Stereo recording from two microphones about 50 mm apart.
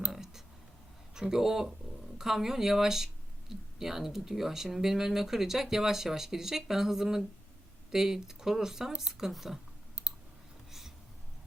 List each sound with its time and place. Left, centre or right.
0.1 s clicking: centre
1.1 s speech: centre
10.7 s a sound: centre